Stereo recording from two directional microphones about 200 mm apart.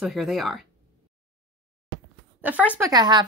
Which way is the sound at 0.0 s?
Centre (ahead or behind).